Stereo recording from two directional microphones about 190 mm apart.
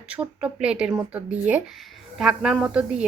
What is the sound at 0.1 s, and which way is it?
A woman's voice, 5° right (ahead or behind).